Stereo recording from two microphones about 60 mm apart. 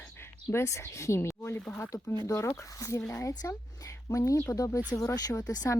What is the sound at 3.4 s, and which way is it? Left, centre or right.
Speech, left.